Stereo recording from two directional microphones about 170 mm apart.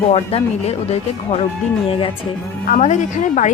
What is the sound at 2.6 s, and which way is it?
Speech, 45° left (ahead or behind).